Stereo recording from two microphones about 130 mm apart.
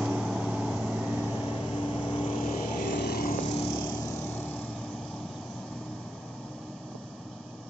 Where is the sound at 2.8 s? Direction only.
90° left.